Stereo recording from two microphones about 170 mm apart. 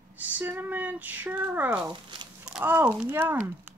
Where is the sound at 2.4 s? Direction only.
10° right (ahead or behind).